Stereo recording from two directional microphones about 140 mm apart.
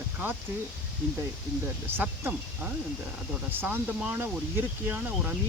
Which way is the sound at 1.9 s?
15° right (ahead or behind).